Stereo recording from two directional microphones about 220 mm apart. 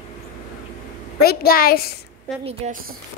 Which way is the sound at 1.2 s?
45° left (ahead or behind).